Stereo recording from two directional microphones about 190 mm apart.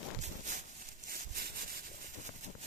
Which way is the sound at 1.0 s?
50° right (ahead or behind).